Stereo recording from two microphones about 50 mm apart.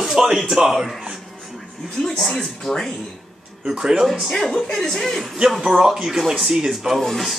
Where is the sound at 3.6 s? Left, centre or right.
Centre.